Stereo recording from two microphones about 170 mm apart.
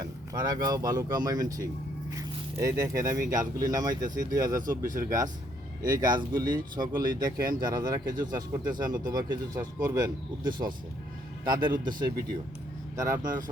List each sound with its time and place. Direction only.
0.0 s speech: 20° right (ahead or behind)
4.0 s speech: 50° right (ahead or behind)
4.3 s speech: 20° right (ahead or behind)